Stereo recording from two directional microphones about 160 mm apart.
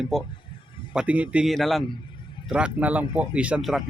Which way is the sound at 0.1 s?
Centre (ahead or behind).